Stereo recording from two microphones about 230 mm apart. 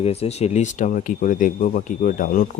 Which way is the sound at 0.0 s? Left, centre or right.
Left.